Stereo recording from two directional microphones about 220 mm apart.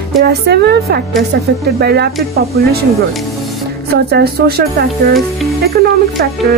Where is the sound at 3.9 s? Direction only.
45° right (ahead or behind).